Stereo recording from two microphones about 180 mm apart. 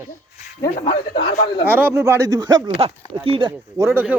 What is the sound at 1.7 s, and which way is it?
Speech, 10° right (ahead or behind).